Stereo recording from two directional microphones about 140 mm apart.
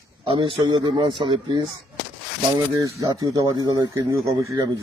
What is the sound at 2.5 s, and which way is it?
Speech, 25° right (ahead or behind).